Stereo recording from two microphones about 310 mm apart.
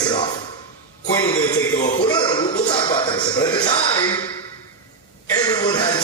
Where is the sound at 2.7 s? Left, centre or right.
Centre.